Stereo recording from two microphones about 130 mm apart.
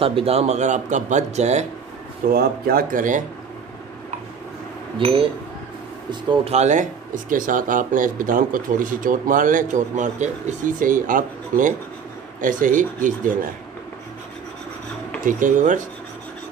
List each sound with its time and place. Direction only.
0.0 s speech: 45° right (ahead or behind)
2.2 s speech: 90° right
4.9 s speech: 45° right (ahead or behind); by 13.3 s 90° right
15.2 s speech: 80° right